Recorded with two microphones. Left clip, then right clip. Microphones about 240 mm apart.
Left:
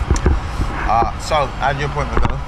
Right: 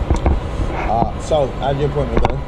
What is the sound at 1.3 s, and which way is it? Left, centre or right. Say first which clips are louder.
Speech: right 1 dB; left.